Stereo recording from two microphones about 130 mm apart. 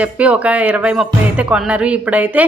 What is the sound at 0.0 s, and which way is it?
Speech, 10° right (ahead or behind).